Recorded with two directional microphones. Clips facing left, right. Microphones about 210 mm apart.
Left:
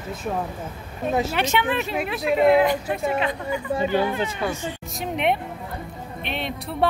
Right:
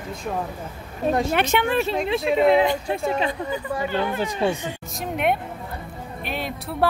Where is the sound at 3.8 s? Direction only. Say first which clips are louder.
Left 4 dB; 15° left (ahead or behind).